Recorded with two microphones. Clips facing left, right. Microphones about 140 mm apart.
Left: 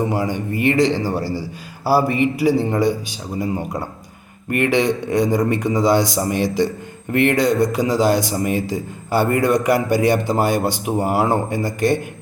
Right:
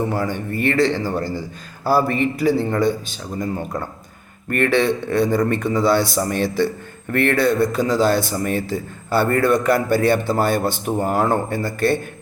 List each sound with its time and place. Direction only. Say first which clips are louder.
0.0 s a man's voice: left 1 dB; 15° left (ahead or behind)